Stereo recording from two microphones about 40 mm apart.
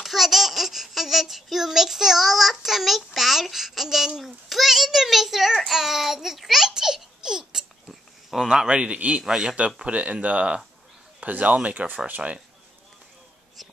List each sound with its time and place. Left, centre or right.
0.0 s speech: centre
4.2 s a sound: centre
5.7 s a child's voice: centre
6.7 s baby laughter: centre
8.3 s speech: centre
8.6 s a man's voice: right
11.2 s speech: right